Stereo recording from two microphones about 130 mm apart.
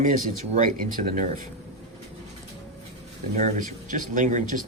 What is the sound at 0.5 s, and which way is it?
Speech, 80° right.